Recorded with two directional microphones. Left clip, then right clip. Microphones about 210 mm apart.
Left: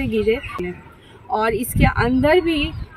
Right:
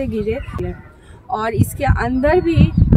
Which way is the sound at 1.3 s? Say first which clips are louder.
Left 1 dB; 15° right (ahead or behind).